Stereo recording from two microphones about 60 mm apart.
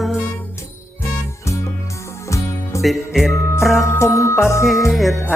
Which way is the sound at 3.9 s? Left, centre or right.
Left.